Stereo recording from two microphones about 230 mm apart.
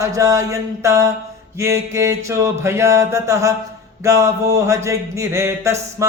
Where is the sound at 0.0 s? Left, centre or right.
Centre.